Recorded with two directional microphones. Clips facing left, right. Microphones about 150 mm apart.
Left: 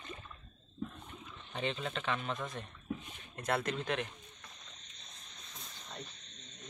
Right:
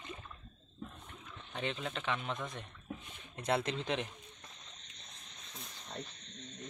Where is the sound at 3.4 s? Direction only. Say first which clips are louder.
Right 1 dB; 20° right (ahead or behind).